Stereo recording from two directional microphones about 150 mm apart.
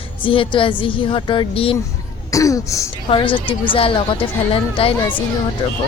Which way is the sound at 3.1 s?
35° left (ahead or behind).